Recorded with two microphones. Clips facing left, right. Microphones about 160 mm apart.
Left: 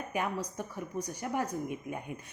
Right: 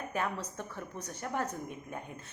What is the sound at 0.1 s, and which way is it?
A woman's voice, 10° left (ahead or behind).